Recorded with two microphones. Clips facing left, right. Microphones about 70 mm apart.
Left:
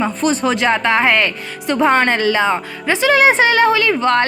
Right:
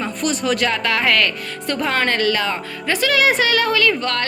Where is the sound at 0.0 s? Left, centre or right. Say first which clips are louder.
Left 5 dB; left.